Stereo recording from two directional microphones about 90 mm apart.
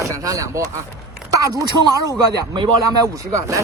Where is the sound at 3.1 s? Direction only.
35° right (ahead or behind).